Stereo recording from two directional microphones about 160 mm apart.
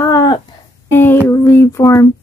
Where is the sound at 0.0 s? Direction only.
20° left (ahead or behind).